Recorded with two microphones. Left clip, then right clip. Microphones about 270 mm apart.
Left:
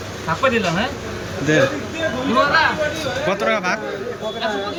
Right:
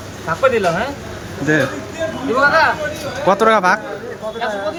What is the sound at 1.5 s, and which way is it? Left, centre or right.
Speech, centre.